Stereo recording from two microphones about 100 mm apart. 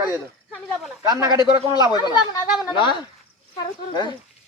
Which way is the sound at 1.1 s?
35° right (ahead or behind).